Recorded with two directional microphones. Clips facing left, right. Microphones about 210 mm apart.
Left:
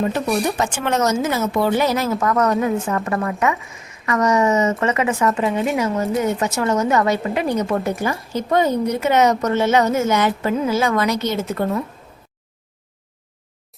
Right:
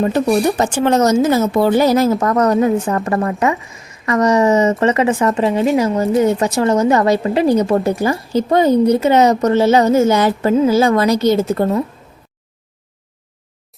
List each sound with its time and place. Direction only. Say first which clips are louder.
0.1 s speech: right 6 dB; 35° right (ahead or behind)